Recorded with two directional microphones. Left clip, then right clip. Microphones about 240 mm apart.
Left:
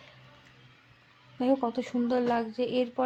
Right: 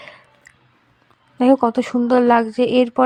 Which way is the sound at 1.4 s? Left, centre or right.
Right.